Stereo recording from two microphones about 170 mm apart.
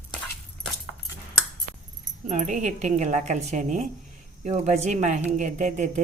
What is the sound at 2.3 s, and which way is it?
Speech, 45° right (ahead or behind).